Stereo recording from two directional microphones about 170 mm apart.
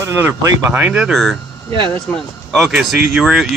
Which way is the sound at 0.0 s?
15° right (ahead or behind).